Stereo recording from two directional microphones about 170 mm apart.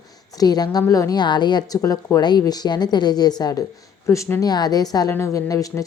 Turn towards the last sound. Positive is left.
turn(degrees=20)  # may be behind; listen again after turning